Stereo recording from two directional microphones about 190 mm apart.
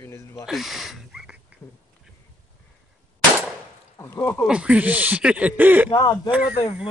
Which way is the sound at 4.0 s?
15° left (ahead or behind).